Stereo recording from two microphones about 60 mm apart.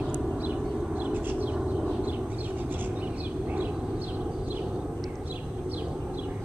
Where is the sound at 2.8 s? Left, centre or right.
Right.